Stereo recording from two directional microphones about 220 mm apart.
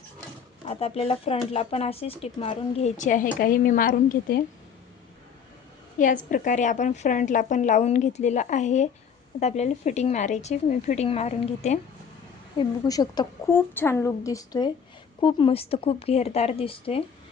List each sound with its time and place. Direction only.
0.7 s speech: 25° left (ahead or behind)
6.3 s a woman's voice: 35° left (ahead or behind)
12.5 s a woman's voice: 20° left (ahead or behind)